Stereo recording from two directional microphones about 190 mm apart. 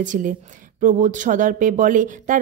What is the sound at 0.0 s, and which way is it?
Speech, 40° right (ahead or behind).